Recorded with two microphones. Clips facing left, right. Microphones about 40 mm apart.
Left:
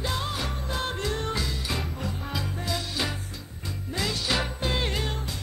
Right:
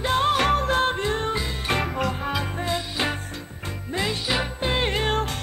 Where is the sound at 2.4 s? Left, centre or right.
Right.